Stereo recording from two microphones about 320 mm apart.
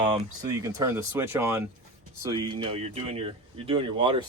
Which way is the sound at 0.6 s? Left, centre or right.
Centre.